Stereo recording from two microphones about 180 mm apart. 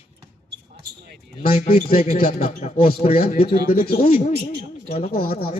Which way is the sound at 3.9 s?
35° left (ahead or behind).